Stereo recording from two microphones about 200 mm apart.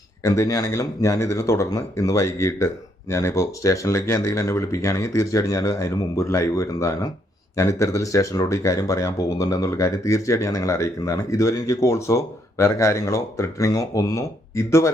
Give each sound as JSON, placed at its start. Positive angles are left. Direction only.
{"t": 0.2, "sound": "speech", "side_deg": 15}